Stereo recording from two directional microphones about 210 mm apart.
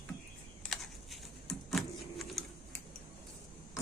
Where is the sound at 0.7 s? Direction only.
Centre (ahead or behind).